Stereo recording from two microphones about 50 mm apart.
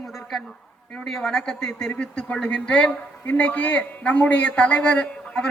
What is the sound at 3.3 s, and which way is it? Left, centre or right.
A man's voice, left.